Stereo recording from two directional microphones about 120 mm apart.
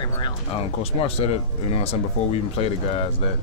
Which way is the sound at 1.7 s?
55° left (ahead or behind).